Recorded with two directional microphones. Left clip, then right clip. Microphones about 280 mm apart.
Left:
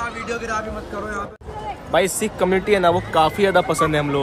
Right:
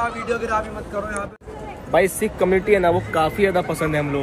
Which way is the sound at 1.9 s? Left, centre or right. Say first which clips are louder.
Right 1 dB; centre.